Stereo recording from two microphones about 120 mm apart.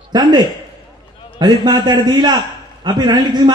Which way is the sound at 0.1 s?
35° right (ahead or behind).